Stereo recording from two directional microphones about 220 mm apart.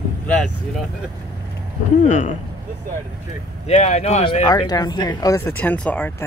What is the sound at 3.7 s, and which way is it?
Speech, 30° left (ahead or behind).